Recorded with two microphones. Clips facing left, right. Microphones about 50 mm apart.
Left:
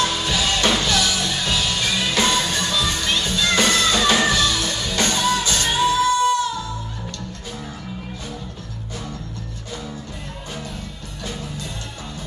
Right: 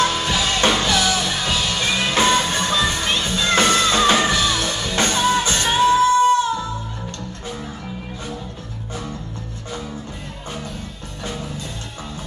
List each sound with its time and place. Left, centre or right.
0.0 s music: right